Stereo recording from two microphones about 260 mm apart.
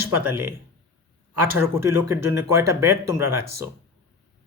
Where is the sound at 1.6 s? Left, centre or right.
Centre.